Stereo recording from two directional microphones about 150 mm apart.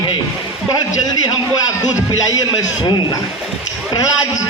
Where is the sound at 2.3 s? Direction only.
25° left (ahead or behind).